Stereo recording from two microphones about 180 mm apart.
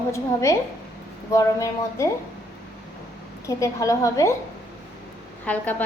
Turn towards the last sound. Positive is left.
turn(degrees=10)  # may be behind; listen again after turning